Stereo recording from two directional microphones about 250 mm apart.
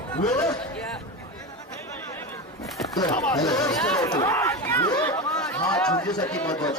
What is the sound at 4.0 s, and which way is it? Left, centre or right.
Chatter, centre.